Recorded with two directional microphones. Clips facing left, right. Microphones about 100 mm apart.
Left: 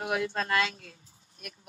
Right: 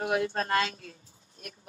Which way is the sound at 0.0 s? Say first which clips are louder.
Right 2 dB; 40° right (ahead or behind).